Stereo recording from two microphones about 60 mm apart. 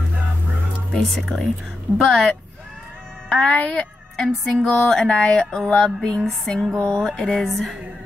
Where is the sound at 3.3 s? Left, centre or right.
Centre.